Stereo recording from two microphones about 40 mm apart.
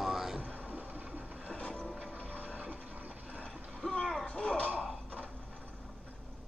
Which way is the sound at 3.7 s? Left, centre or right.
Left.